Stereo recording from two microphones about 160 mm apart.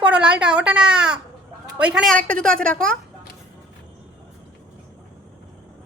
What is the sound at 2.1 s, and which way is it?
Speech, 5° left (ahead or behind).